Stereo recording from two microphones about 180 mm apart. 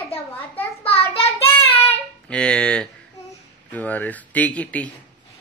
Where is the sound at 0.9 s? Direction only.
35° left (ahead or behind).